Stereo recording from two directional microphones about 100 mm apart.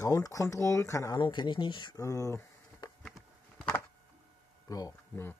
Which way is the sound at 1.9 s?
35° left (ahead or behind).